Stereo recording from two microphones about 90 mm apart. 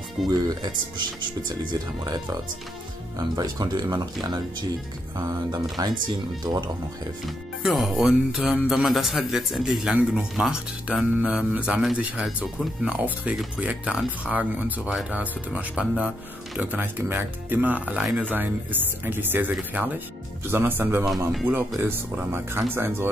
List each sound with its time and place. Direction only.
0.3 s speech: 50° right (ahead or behind)
7.2 s speech: centre (ahead or behind); by 21.0 s 25° right (ahead or behind)
21.0 s speech: centre (ahead or behind)
21.7 s speech: 25° right (ahead or behind)